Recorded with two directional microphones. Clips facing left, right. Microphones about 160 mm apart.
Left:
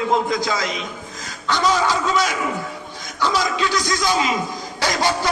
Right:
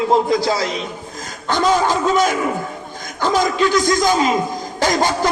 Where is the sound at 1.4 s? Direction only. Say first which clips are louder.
Right 3 dB; 50° right (ahead or behind).